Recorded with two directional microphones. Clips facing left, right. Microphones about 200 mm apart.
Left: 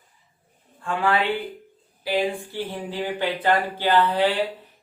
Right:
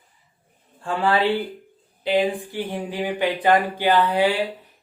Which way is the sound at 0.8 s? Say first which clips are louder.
Right 2 dB; 30° right (ahead or behind).